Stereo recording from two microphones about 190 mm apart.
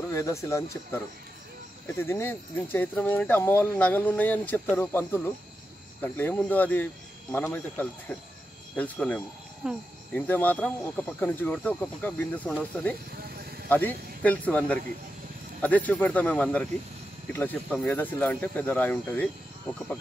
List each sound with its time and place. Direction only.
0.1 s speech: 15° left (ahead or behind)
9.6 s speech: 5° right (ahead or behind)
10.1 s speech: 10° left (ahead or behind)
13.7 s speech: 10° left (ahead or behind)